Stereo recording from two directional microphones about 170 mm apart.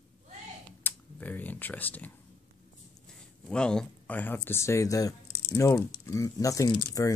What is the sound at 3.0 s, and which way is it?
Speech, 5° left (ahead or behind).